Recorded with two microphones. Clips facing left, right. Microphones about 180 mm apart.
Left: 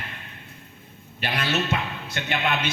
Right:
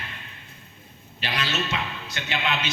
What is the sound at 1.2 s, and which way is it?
Music, 55° left (ahead or behind).